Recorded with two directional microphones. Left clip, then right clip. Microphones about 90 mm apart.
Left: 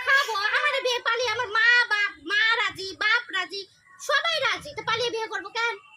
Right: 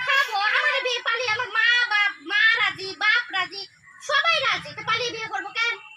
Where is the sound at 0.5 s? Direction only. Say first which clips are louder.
Right 2 dB; 25° left (ahead or behind).